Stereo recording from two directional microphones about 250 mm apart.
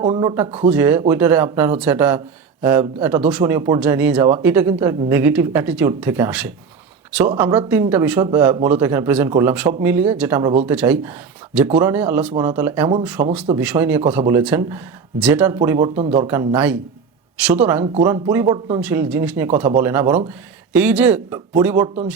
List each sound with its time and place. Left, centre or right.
0.0 s speech: centre
13.2 s speech: right
13.6 s speech: centre